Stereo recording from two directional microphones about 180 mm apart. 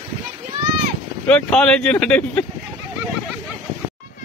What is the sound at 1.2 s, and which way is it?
Speech, 5° left (ahead or behind).